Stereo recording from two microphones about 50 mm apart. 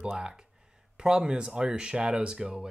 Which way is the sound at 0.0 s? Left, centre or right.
Centre.